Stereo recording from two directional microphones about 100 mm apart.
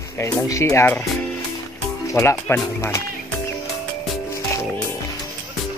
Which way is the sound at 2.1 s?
25° left (ahead or behind).